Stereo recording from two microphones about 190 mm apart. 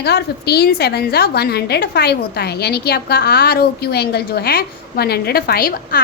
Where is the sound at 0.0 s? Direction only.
60° left (ahead or behind).